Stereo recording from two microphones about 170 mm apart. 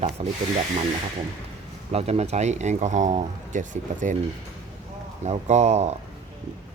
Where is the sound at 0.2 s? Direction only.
35° right (ahead or behind).